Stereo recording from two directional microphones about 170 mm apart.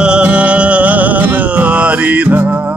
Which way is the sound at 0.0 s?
5° right (ahead or behind).